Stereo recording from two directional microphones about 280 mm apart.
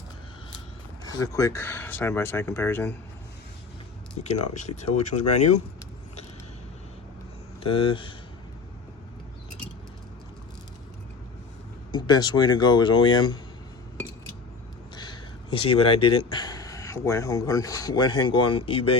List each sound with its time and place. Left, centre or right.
1.0 s speech: centre
4.2 s speech: left
7.6 s speech: centre
11.9 s speech: centre
14.9 s speech: centre